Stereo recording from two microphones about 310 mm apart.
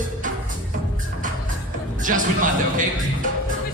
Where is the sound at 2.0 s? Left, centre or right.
Right.